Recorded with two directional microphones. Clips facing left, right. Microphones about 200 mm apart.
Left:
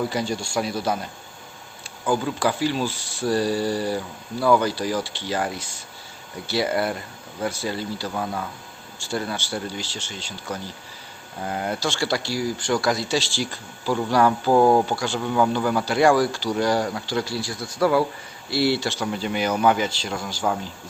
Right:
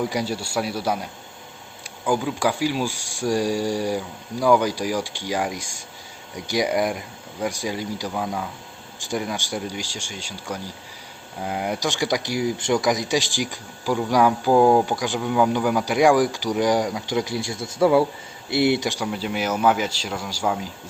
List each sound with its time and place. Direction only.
0.0 s speech: 10° right (ahead or behind)
2.0 s speech: 10° right (ahead or behind)